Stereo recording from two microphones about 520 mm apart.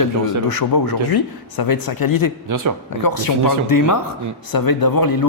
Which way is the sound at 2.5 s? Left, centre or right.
Right.